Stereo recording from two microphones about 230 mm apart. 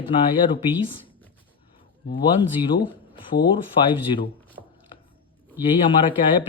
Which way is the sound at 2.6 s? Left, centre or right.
Left.